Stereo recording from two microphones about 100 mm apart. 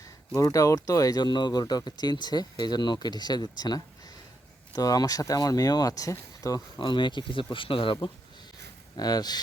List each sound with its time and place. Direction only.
0.3 s speech: 35° left (ahead or behind)
6.7 s speech: 50° left (ahead or behind)
9.0 s speech: 40° left (ahead or behind)